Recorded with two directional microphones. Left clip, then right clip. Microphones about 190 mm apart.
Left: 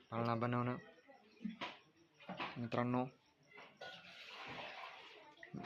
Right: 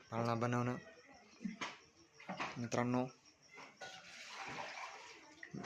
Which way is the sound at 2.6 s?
Centre (ahead or behind).